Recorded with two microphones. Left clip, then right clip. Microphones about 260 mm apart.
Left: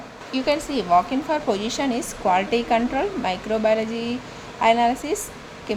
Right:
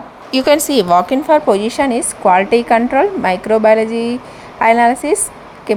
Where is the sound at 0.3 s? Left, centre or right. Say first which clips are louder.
Right 11 dB; right.